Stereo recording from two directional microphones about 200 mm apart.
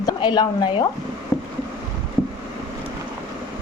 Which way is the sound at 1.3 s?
15° left (ahead or behind).